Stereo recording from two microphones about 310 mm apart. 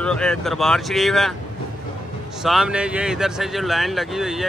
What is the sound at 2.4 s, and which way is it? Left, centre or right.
Speech, centre.